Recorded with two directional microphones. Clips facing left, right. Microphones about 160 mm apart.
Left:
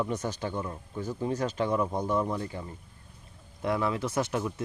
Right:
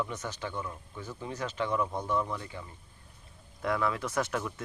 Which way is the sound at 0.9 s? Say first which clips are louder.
Left 8 dB; 40° left (ahead or behind).